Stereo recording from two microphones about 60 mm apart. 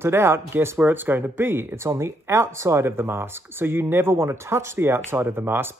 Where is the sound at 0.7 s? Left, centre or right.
Right.